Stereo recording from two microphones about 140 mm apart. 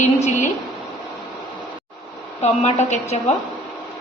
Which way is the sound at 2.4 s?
55° left (ahead or behind).